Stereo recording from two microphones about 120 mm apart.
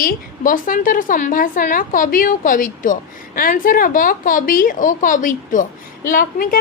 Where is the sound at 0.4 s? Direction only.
90° left.